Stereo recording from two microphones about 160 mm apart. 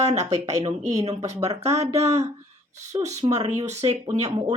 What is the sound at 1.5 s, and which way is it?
Speech, 45° right (ahead or behind).